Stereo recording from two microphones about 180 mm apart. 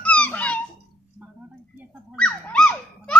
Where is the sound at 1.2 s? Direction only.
10° right (ahead or behind).